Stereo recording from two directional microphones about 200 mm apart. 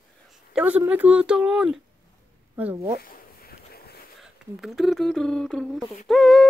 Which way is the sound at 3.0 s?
50° left (ahead or behind).